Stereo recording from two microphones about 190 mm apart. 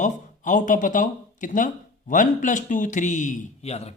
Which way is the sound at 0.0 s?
40° left (ahead or behind).